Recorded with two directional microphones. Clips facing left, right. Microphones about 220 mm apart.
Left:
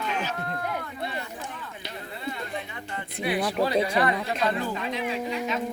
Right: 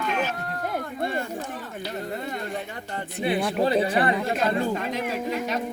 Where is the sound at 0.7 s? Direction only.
50° right (ahead or behind).